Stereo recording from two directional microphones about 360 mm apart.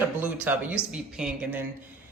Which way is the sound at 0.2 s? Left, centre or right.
Centre.